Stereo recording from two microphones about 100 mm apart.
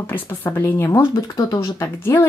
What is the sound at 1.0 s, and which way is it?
Speech, 45° left (ahead or behind).